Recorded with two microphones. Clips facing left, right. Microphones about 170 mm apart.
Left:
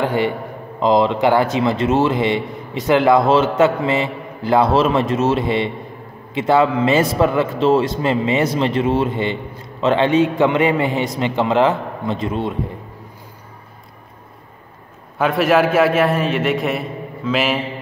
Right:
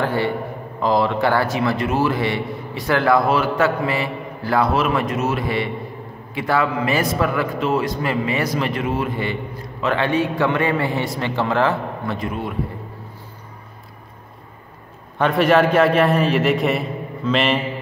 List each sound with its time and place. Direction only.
0.0 s a man's voice: 15° left (ahead or behind)
15.1 s a man's voice: 5° left (ahead or behind)